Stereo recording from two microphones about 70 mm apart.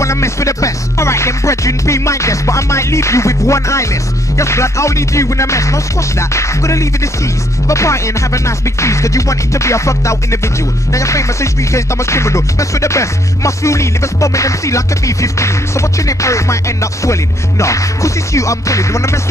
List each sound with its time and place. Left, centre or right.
0.0 s music: left